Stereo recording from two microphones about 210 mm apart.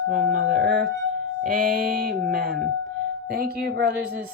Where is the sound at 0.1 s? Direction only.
45° right (ahead or behind).